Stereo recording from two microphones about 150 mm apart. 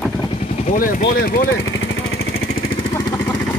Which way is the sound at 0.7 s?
70° left (ahead or behind).